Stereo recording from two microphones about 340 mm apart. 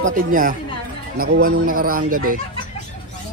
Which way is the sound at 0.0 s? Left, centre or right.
Right.